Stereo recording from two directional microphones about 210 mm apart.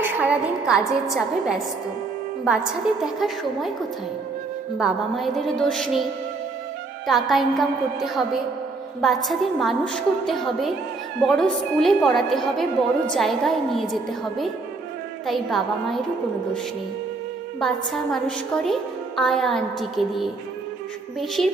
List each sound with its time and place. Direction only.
0.0 s a woman's voice: 10° right (ahead or behind)
3.0 s a woman's voice: centre (ahead or behind)
4.8 s a woman's voice: centre (ahead or behind)
7.1 s a woman's voice: centre (ahead or behind)
17.6 s a woman's voice: centre (ahead or behind)